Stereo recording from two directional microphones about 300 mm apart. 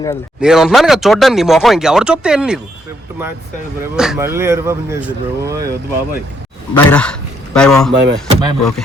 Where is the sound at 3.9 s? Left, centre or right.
Centre.